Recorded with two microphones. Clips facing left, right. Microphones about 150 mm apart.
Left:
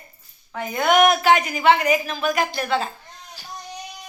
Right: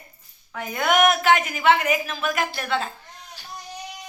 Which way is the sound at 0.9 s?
Centre (ahead or behind).